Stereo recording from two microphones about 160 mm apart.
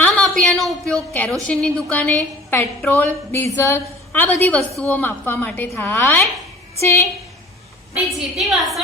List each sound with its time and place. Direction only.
0.0 s a sound: 5° left (ahead or behind)
1.1 s a woman's voice: 10° left (ahead or behind)
8.4 s a woman's voice: centre (ahead or behind)